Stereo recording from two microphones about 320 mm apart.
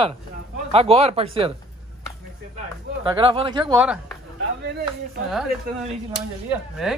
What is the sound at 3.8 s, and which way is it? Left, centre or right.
Speech, centre.